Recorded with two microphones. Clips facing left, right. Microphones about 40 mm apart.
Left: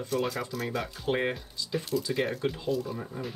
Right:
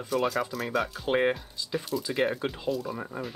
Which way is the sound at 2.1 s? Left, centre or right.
Centre.